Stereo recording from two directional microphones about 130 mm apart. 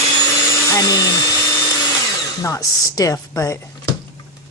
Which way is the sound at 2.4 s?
25° left (ahead or behind).